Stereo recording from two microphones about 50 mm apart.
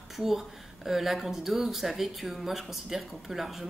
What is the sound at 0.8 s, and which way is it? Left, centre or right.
Speech, centre.